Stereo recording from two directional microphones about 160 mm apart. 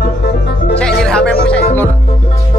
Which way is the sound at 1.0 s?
5° left (ahead or behind).